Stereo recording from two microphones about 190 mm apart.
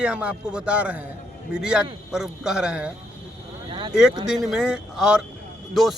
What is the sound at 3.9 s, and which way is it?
A man's voice, 5° right (ahead or behind).